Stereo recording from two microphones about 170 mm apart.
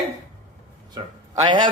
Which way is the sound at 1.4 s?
25° right (ahead or behind).